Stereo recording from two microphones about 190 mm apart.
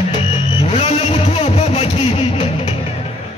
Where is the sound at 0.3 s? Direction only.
30° left (ahead or behind).